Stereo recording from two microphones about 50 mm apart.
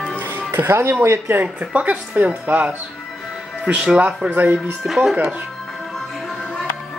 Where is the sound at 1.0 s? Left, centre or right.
Right.